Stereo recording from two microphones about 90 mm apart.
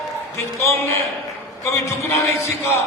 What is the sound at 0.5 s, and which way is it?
A man's voice, 30° left (ahead or behind).